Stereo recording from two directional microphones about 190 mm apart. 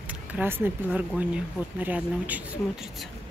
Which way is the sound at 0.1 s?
10° right (ahead or behind).